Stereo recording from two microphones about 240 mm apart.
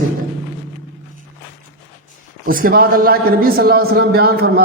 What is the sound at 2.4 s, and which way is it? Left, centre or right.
A woman's voice, right.